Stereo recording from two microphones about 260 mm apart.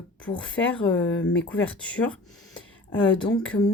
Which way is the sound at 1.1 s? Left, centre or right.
Left.